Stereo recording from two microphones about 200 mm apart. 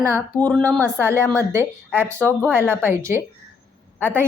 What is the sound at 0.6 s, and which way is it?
Speech, 15° right (ahead or behind).